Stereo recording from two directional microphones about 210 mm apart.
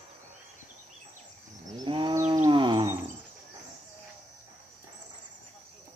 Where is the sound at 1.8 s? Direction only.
25° right (ahead or behind).